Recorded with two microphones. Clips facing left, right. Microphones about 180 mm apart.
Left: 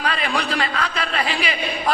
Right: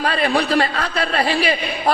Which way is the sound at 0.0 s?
35° right (ahead or behind).